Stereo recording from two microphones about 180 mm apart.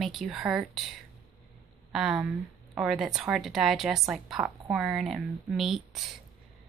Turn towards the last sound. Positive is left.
turn(degrees=0)  # may be behind; listen again after turning